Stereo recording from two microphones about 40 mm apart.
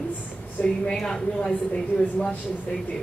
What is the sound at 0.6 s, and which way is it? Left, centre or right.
Speech, centre.